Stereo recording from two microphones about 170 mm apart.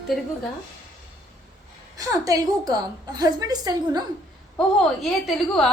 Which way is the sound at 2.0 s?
20° right (ahead or behind).